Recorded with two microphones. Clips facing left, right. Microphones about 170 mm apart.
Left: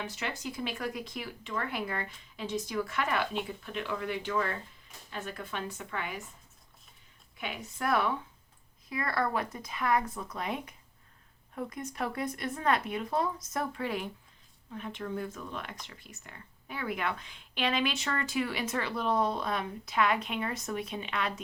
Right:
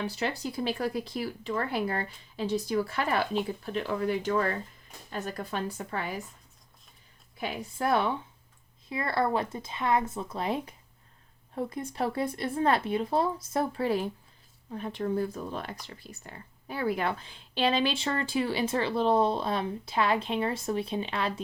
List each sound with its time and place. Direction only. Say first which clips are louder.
0.0 s speech: right 5 dB; 35° right (ahead or behind)
7.3 s speech: right 5 dB; 35° right (ahead or behind)